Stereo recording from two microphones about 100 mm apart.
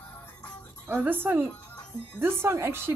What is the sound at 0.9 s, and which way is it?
A woman's voice, 20° right (ahead or behind).